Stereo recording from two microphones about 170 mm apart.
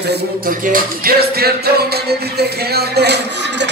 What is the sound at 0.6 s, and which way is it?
Music, 55° right (ahead or behind).